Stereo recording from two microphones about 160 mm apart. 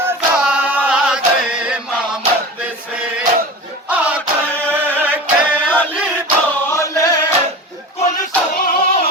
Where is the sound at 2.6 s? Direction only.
10° right (ahead or behind).